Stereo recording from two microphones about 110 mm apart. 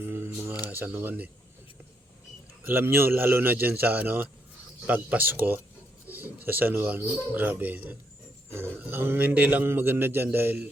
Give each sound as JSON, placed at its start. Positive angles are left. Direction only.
{"t": 0.0, "sound": "a man's voice", "side_deg": -20}
{"t": 2.6, "sound": "a man's voice", "side_deg": -20}
{"t": 6.1, "sound": "a sound", "side_deg": -15}
{"t": 6.4, "sound": "a man's voice", "side_deg": -15}